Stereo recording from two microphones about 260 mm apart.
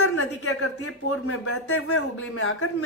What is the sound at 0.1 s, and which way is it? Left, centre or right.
Speech, left.